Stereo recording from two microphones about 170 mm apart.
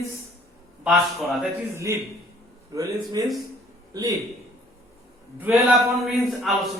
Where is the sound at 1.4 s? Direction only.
15° right (ahead or behind).